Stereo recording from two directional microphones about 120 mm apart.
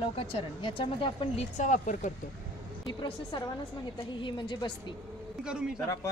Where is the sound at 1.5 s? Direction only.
90° left.